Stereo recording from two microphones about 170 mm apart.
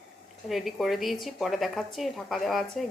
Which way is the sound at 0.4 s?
Centre (ahead or behind).